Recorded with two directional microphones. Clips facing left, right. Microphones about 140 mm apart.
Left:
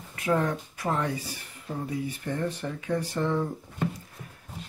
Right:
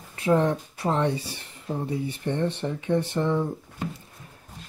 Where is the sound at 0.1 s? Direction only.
30° right (ahead or behind).